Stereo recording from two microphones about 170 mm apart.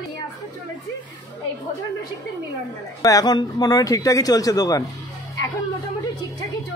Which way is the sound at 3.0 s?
20° left (ahead or behind).